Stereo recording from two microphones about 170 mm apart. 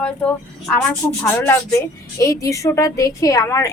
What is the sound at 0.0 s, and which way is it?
A woman's voice, 5° left (ahead or behind).